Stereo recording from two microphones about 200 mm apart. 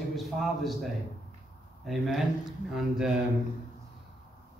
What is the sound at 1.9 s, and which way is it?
Speech, centre (ahead or behind).